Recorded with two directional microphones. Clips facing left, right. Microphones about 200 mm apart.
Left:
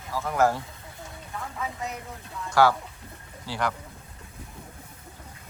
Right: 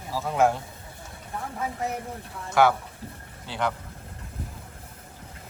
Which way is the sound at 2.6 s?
20° right (ahead or behind).